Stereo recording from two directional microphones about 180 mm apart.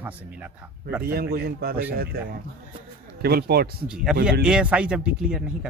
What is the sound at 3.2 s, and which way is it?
Speech, 60° right (ahead or behind).